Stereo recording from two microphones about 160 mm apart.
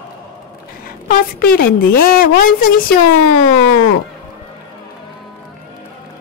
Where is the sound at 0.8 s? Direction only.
65° left (ahead or behind).